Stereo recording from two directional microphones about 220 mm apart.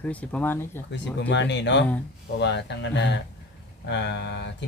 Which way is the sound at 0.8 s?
55° left (ahead or behind).